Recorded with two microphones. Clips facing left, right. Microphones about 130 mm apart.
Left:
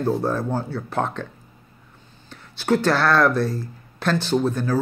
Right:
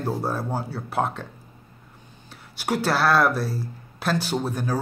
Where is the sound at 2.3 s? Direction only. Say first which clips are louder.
Left 6 dB; 10° right (ahead or behind).